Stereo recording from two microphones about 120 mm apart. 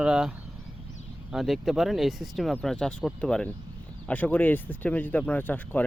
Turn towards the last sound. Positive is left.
turn(degrees=15)  # may be behind; listen again after turning